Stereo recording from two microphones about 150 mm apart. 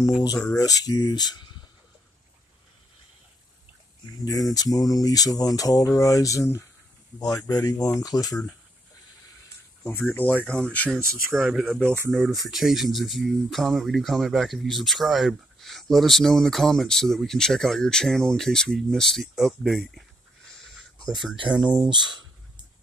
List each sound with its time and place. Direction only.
0.6 s speech: 25° left (ahead or behind)
4.2 s speech: 25° left (ahead or behind)
9.8 s speech: 15° left (ahead or behind); by 21.8 s 5° right (ahead or behind)
21.8 s speech: 30° right (ahead or behind)